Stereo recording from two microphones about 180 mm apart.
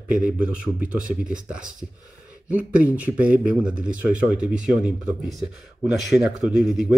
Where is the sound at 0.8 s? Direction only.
45° right (ahead or behind).